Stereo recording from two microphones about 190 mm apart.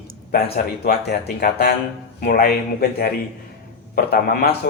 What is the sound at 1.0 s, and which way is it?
Speech, 55° left (ahead or behind).